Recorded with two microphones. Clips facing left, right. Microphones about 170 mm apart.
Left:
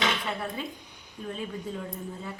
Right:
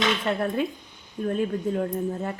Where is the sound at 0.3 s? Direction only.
55° right (ahead or behind).